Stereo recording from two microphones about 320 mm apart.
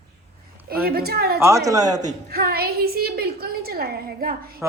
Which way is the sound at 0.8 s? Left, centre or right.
Right.